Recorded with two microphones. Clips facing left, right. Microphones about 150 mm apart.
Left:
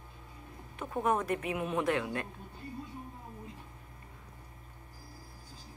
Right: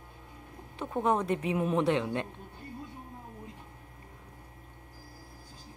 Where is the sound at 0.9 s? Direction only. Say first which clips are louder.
Right 2 dB; 25° right (ahead or behind).